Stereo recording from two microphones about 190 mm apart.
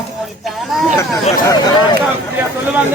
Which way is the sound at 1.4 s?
20° left (ahead or behind).